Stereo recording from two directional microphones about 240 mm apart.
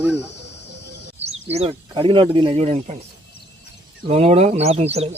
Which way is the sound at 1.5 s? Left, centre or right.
Right.